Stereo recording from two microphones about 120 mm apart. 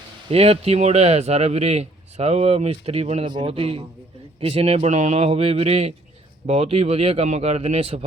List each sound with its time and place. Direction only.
0.3 s speech: 55° right (ahead or behind)
3.2 s speech: 45° right (ahead or behind)